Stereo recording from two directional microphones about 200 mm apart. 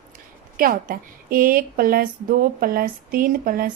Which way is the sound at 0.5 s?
45° right (ahead or behind).